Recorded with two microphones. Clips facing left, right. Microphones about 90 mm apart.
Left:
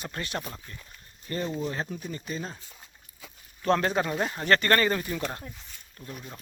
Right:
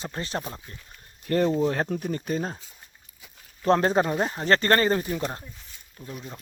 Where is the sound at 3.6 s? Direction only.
30° right (ahead or behind).